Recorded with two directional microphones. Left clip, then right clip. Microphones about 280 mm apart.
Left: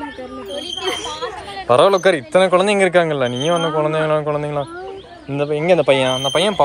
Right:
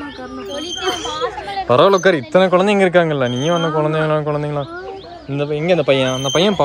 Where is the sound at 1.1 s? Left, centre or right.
Right.